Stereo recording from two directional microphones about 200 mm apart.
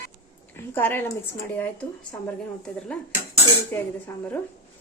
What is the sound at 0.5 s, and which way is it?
Speech, 10° left (ahead or behind).